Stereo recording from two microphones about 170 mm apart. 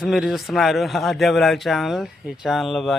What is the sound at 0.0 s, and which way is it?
A man's voice, centre (ahead or behind).